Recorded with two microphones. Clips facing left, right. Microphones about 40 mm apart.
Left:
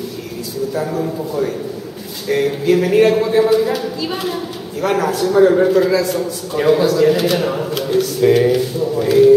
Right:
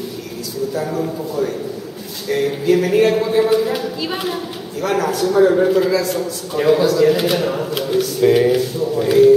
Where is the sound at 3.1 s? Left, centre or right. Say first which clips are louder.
Left 2 dB; centre.